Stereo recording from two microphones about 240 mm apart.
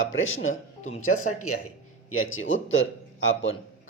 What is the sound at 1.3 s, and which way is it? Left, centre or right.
Speech, left.